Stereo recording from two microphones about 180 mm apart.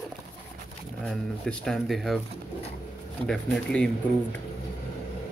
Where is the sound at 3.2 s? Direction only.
Centre (ahead or behind).